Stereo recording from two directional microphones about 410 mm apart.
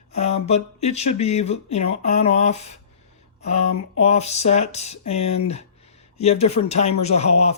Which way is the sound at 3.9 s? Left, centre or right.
Centre.